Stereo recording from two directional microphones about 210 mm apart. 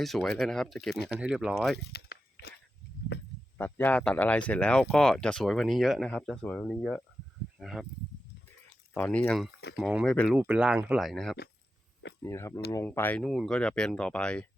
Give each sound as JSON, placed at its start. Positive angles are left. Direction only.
{"t": 0.0, "sound": "speech", "side_deg": 0}
{"t": 1.8, "sound": "a sound", "side_deg": 50}
{"t": 3.6, "sound": "speech", "side_deg": 10}
{"t": 8.9, "sound": "speech", "side_deg": 5}
{"t": 12.2, "sound": "speech", "side_deg": 15}